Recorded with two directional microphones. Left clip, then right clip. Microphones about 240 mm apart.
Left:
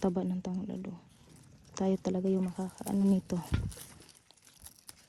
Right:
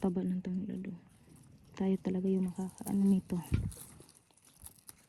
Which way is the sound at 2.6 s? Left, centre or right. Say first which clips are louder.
Left 2 dB; right.